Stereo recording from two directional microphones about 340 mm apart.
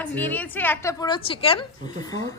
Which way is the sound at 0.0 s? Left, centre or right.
Centre.